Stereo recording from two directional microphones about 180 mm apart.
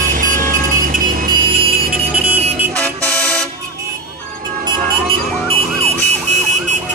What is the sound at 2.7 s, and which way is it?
Vehicle, 10° left (ahead or behind).